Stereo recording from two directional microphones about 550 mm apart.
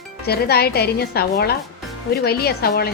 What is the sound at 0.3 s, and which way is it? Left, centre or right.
A woman's voice, centre.